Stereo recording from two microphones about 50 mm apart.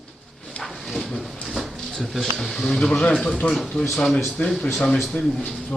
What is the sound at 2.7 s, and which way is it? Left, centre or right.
Speech, centre.